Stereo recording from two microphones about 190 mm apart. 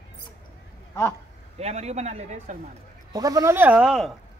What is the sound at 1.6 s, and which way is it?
A man's voice, 35° right (ahead or behind).